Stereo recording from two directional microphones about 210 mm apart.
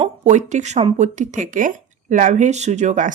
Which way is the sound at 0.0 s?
35° right (ahead or behind).